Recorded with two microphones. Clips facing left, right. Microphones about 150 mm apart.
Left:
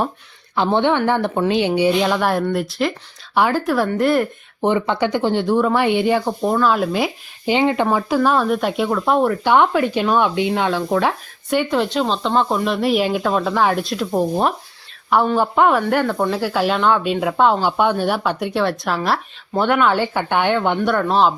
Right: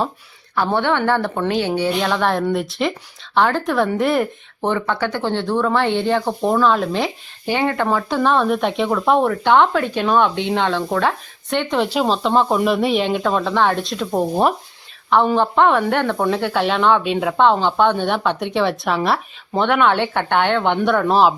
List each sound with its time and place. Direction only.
0.5 s speech: 20° left (ahead or behind); by 4.3 s centre (ahead or behind)
4.6 s speech: 15° left (ahead or behind); by 14.5 s 5° right (ahead or behind)
15.4 s speech: 5° left (ahead or behind)